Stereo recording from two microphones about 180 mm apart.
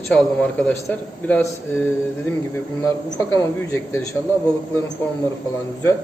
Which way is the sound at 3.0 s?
20° left (ahead or behind).